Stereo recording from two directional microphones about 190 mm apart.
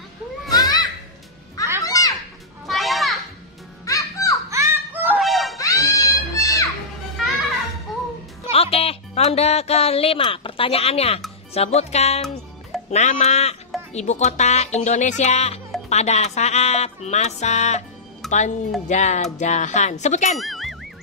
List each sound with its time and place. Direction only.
0.5 s children playing: 20° left (ahead or behind)
1.9 s children playing: 20° left (ahead or behind)
2.6 s children playing: centre (ahead or behind)
3.8 s music: 15° left (ahead or behind)
4.5 s music: 15° right (ahead or behind)
5.2 s music: centre (ahead or behind)
5.6 s music: 15° left (ahead or behind)
7.9 s music: centre (ahead or behind)
8.5 s music: 30° left (ahead or behind)
20.3 s music: centre (ahead or behind)